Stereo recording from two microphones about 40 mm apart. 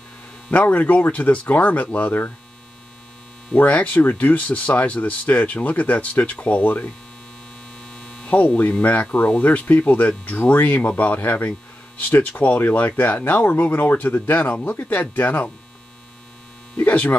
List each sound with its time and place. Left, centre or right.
0.7 s speech: left
3.5 s speech: left
7.9 s hum: left
8.3 s speech: left
13.3 s speech: left
16.8 s speech: left